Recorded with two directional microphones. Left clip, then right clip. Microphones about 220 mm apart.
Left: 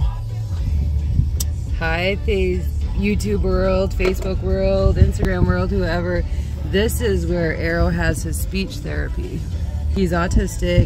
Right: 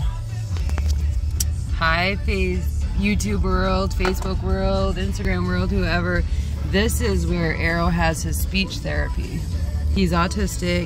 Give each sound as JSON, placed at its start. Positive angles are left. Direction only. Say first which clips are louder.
{"t": 1.8, "sound": "speech", "louder": "right 1 dB", "side_deg": -40}
{"t": 3.0, "sound": "speech", "louder": "left 3 dB", "side_deg": 0}